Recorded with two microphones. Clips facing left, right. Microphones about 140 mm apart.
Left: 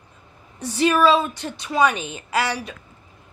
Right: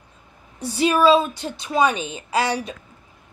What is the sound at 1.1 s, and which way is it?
A woman's voice, 25° right (ahead or behind).